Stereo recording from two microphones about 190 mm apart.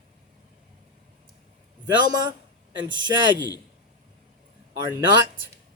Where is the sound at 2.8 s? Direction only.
25° right (ahead or behind).